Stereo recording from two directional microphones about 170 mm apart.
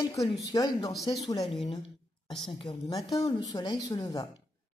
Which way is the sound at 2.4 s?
30° left (ahead or behind).